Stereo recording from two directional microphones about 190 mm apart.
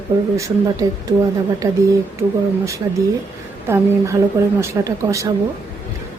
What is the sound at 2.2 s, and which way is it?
Speech, 10° right (ahead or behind).